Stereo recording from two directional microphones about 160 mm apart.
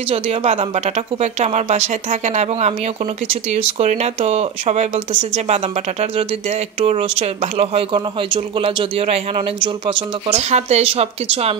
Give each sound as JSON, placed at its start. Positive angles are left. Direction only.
{"t": 0.1, "sound": "speech", "side_deg": -40}